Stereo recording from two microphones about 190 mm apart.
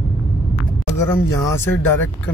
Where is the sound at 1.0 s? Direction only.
15° left (ahead or behind).